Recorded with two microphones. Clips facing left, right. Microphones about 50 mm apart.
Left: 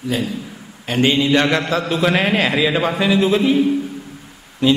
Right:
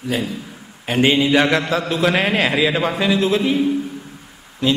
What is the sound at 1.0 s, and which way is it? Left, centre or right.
Mantra, centre.